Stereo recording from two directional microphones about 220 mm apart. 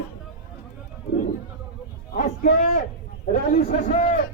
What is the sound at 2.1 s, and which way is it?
Speech, 40° left (ahead or behind).